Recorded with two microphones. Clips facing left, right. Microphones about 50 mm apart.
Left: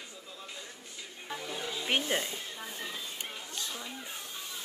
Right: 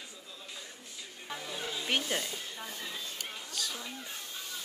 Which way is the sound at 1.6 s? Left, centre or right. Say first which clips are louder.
Left 1 dB; centre.